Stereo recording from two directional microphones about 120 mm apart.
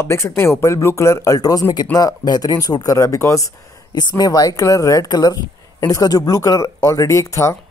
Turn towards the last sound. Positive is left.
turn(degrees=25)  # may be behind; listen again after turning